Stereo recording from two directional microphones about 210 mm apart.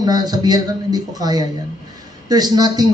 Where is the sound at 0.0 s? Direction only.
20° right (ahead or behind).